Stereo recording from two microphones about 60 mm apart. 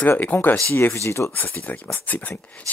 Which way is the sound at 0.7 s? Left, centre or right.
Left.